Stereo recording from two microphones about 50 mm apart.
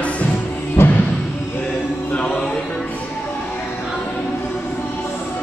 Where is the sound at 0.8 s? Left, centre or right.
Left.